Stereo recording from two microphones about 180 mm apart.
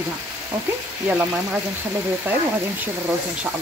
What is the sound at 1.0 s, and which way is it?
Speech, 5° right (ahead or behind).